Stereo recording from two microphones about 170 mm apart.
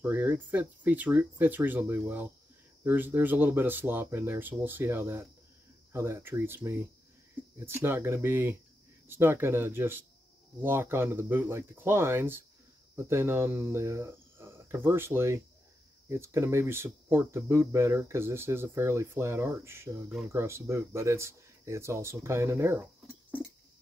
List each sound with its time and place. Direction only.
0.0 s speech: 10° right (ahead or behind)